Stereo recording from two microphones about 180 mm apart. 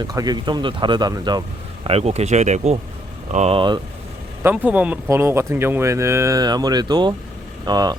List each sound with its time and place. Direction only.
0.0 s speech: 20° right (ahead or behind)
4.4 s speech: 10° right (ahead or behind)